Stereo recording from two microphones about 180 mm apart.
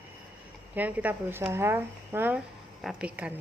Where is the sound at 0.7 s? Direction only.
10° right (ahead or behind).